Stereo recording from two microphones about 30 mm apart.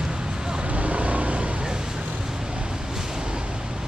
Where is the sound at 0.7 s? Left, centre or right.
Right.